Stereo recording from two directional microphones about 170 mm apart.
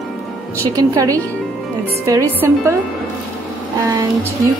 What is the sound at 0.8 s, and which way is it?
A woman's voice, 20° right (ahead or behind).